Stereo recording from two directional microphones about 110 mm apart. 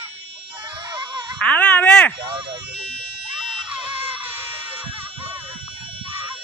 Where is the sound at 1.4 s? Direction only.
15° left (ahead or behind).